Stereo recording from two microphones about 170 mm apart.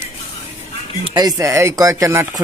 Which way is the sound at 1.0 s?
25° right (ahead or behind).